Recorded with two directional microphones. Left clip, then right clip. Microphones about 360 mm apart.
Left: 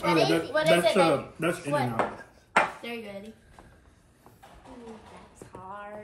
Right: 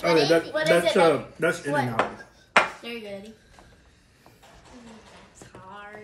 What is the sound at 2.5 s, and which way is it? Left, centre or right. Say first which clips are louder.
Dishes: right 3 dB; centre.